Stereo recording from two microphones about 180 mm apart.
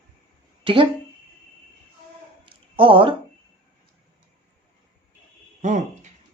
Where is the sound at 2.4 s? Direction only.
30° right (ahead or behind).